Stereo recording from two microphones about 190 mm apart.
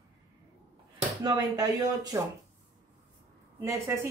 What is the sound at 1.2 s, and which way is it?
Speech, 20° right (ahead or behind).